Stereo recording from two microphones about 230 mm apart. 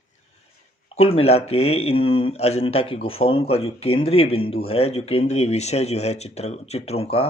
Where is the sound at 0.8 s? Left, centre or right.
Left.